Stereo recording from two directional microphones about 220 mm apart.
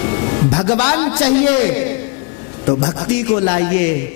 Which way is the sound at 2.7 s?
25° left (ahead or behind).